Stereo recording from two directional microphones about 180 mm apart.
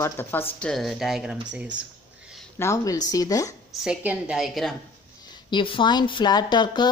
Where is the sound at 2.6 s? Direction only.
15° left (ahead or behind).